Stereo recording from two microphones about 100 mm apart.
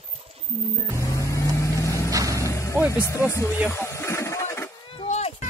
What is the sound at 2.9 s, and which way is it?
Speech, 30° left (ahead or behind).